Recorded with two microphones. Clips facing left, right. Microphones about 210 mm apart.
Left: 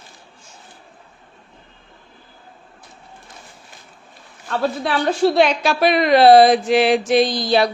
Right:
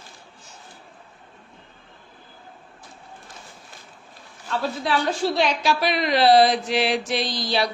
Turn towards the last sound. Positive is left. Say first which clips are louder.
# left 8 dB
turn(degrees=50)  # may be behind; listen again after turning